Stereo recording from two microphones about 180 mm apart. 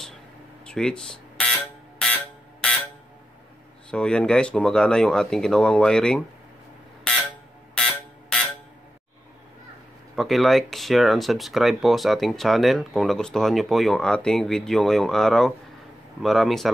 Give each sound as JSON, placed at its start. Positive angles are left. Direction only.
{"t": 0.7, "sound": "a sound", "side_deg": 5}
{"t": 3.9, "sound": "speech", "side_deg": 5}
{"t": 7.1, "sound": "buzzer", "side_deg": 5}
{"t": 10.1, "sound": "speech", "side_deg": 0}